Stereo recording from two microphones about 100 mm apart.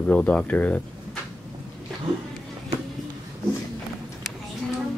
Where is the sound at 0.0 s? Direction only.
10° left (ahead or behind).